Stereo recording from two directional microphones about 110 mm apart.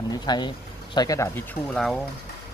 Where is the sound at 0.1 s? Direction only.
40° left (ahead or behind).